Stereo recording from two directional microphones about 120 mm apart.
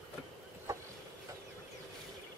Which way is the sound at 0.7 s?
30° right (ahead or behind).